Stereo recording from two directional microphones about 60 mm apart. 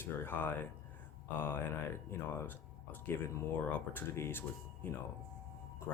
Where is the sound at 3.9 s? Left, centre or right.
Left.